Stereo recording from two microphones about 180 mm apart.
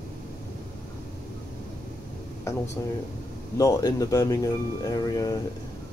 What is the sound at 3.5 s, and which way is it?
Speech, 20° left (ahead or behind).